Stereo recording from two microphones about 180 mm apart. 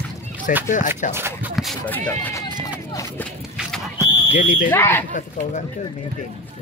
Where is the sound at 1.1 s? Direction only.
15° right (ahead or behind).